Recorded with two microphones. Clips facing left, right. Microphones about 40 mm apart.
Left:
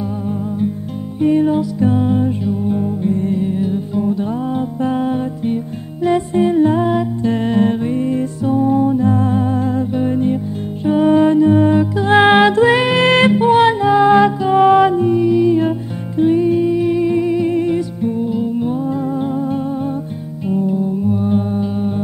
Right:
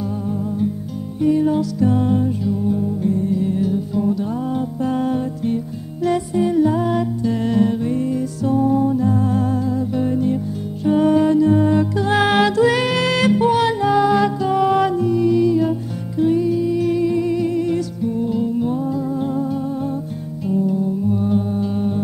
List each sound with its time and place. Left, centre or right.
1.2 s music: left
6.3 s humming: left
7.2 s music: left
8.4 s music: left
9.6 s music: left
9.9 s music: left
10.9 s music: centre
11.1 s music: left
13.7 s music: centre
14.0 s music: left; by 15.5 s centre
16.2 s music: left
18.9 s music: left
19.2 s music: left
21.6 s hum: centre